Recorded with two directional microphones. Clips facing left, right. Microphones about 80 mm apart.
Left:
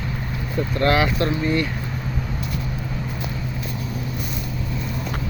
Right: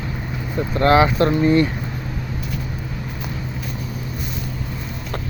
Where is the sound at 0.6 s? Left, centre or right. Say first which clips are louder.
Right 4 dB; right.